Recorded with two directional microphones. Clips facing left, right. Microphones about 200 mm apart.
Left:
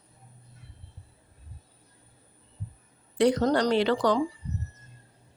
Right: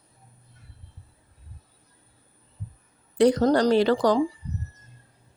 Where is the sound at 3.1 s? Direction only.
40° right (ahead or behind).